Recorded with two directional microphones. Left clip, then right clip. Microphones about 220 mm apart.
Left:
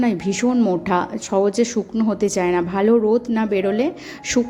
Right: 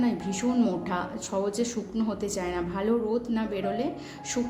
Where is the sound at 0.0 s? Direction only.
35° left (ahead or behind).